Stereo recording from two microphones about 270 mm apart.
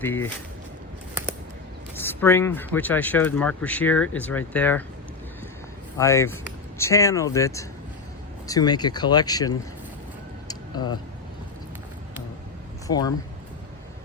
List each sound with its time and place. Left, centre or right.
0.0 s speech: centre
2.0 s speech: centre
6.0 s speech: centre
10.5 s vehicle: centre
12.9 s speech: centre